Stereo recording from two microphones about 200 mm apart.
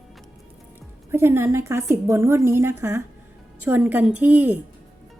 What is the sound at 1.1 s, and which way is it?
A woman's voice, 15° right (ahead or behind).